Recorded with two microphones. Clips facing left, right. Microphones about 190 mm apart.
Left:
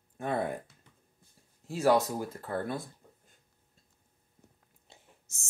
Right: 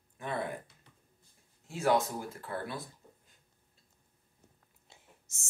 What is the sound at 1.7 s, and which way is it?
Speech, 35° left (ahead or behind).